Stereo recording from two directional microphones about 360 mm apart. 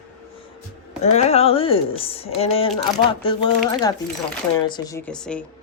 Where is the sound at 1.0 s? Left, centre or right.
Centre.